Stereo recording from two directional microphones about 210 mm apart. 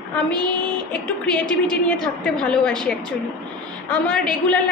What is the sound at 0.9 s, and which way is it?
A woman's voice, 5° left (ahead or behind).